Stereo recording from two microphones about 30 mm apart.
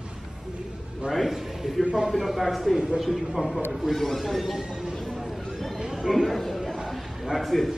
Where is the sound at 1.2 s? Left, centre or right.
Centre.